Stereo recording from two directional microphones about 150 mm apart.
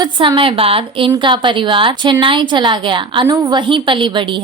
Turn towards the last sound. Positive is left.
turn(degrees=-35)  # may be behind; listen again after turning